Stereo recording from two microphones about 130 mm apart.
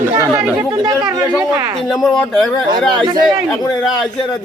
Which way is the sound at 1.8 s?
Centre (ahead or behind).